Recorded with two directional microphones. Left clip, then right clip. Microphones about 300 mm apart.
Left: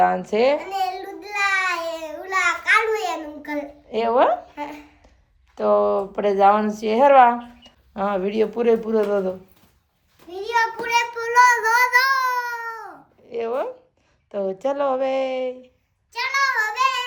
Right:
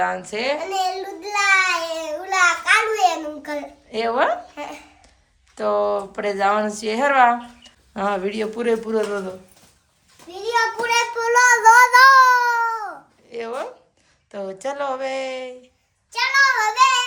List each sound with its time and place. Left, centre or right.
0.0 s speech: centre
0.7 s child singing: centre
3.8 s speech: centre
5.5 s speech: centre
10.4 s child singing: centre
13.3 s speech: centre
16.1 s child singing: centre